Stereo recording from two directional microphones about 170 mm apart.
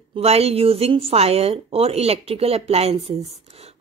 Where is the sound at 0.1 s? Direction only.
35° right (ahead or behind).